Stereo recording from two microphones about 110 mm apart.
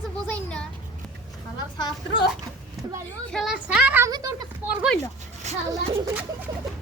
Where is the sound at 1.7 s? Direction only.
45° left (ahead or behind).